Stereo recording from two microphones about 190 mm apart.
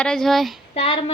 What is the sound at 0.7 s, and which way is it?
Speech, 30° left (ahead or behind).